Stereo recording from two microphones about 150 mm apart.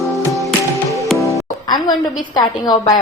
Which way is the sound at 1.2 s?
20° left (ahead or behind).